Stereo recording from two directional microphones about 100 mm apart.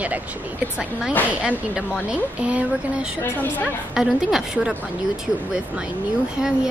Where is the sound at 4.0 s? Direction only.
5° right (ahead or behind).